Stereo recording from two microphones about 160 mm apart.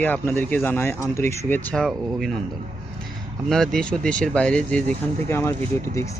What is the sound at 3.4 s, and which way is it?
Speech, centre (ahead or behind).